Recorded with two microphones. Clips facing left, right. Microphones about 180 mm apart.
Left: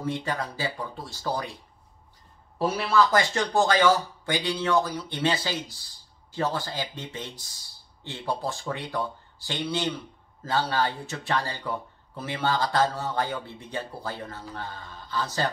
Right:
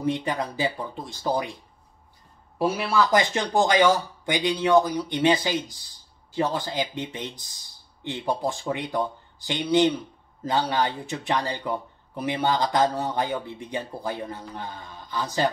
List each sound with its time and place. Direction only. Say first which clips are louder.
0.0 s speech: right 4 dB; 15° right (ahead or behind)
2.6 s speech: even; 10° right (ahead or behind)